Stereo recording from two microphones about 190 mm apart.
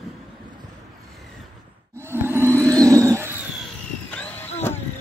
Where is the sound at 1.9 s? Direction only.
10° right (ahead or behind).